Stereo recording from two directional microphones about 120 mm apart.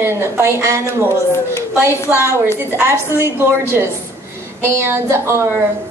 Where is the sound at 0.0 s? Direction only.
20° right (ahead or behind).